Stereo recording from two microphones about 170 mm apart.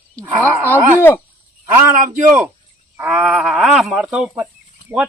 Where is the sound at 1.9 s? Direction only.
50° right (ahead or behind).